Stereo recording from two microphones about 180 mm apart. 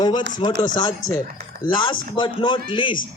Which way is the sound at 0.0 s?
25° left (ahead or behind).